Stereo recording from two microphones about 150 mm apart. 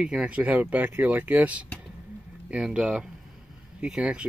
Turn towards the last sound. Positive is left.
turn(degrees=-5)  # may be behind; listen again after turning